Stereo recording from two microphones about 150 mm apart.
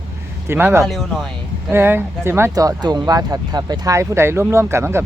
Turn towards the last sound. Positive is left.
turn(degrees=-15)  # may be behind; listen again after turning